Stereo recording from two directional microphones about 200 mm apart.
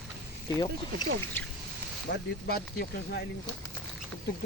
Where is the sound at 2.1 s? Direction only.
55° left (ahead or behind).